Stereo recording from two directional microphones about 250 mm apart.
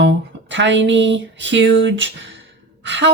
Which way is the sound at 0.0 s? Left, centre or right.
Right.